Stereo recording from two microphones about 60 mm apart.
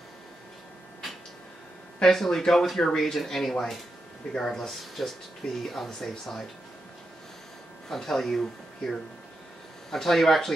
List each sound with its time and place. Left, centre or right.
2.0 s speech: centre
7.9 s speech: centre